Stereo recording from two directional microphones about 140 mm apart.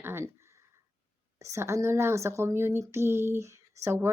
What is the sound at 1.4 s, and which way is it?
Speech, 20° right (ahead or behind).